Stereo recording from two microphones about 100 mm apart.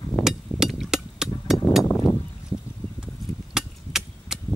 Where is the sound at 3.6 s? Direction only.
5° right (ahead or behind).